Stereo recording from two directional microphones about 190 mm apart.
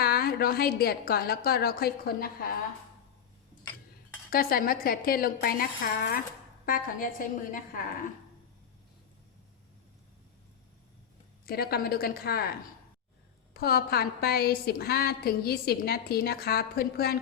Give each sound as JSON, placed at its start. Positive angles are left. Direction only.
{"t": 0.0, "sound": "a woman's voice", "side_deg": 55}
{"t": 4.3, "sound": "a woman's voice", "side_deg": 50}
{"t": 11.4, "sound": "a woman's voice", "side_deg": 55}